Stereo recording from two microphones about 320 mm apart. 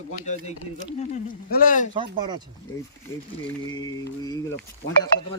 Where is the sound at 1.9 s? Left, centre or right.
Centre.